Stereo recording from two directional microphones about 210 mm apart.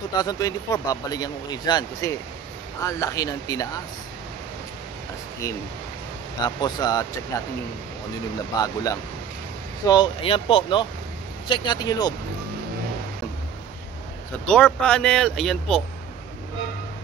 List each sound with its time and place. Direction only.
0.2 s speech: 15° left (ahead or behind)
6.4 s speech: 20° left (ahead or behind)
8.5 s speech: 20° left (ahead or behind)
9.8 s speech: 25° left (ahead or behind)
14.4 s speech: 5° left (ahead or behind)